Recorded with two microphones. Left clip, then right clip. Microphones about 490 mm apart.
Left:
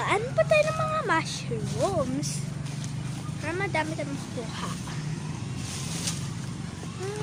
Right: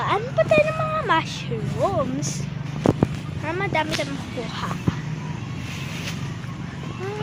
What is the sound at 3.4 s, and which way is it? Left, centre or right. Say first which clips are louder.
Vehicle: right 5 dB; left.